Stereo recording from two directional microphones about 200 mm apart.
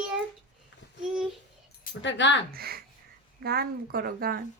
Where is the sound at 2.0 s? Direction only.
65° left (ahead or behind).